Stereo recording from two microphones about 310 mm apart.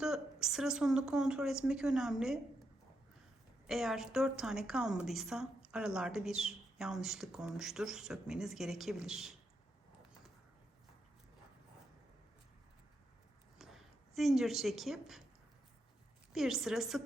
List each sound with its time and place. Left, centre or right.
0.0 s a woman's voice: centre
3.7 s a woman's voice: centre
13.6 s a woman's voice: centre
16.3 s a woman's voice: centre